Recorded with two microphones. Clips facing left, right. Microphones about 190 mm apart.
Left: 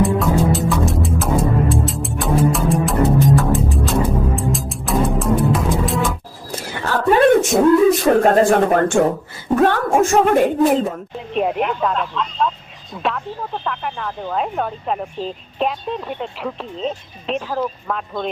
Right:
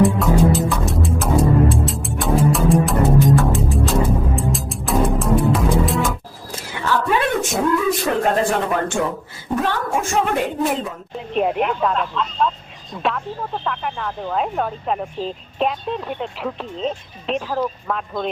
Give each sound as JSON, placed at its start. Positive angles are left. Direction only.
{"t": 0.2, "sound": "music", "side_deg": 0}
{"t": 6.8, "sound": "a sound", "side_deg": 45}
{"t": 7.8, "sound": "speech", "side_deg": 40}
{"t": 11.3, "sound": "speech", "side_deg": 0}